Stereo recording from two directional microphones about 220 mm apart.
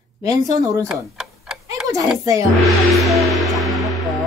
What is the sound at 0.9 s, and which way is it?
Tick-tock, centre (ahead or behind).